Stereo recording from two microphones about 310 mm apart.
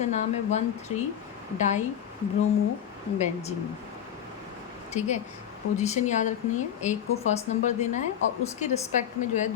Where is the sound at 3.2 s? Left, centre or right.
Left.